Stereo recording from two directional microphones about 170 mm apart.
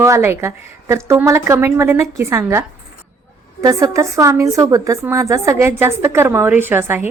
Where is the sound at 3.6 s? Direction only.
20° right (ahead or behind).